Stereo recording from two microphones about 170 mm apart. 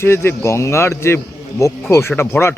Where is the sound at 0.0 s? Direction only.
15° left (ahead or behind).